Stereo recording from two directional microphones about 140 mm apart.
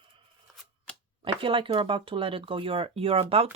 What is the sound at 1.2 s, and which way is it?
Speech, 40° right (ahead or behind).